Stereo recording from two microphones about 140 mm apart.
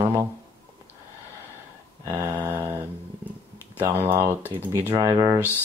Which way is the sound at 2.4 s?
15° right (ahead or behind).